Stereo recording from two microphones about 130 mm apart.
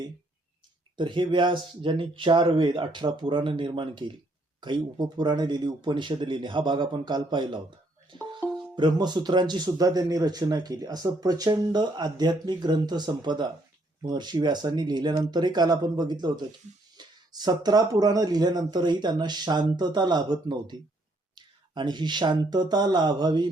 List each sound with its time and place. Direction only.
0.9 s speech: 40° right (ahead or behind)
8.7 s speech: 35° right (ahead or behind)